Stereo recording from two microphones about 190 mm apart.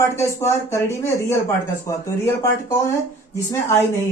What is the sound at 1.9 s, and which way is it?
Speech, 15° left (ahead or behind).